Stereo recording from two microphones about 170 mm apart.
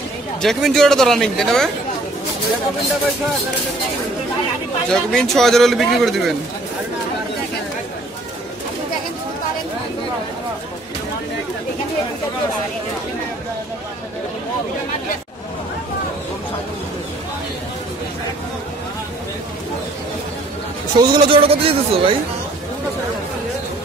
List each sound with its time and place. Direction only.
0.4 s speech: centre (ahead or behind)
4.8 s speech: 5° left (ahead or behind)
21.0 s speech: 30° right (ahead or behind)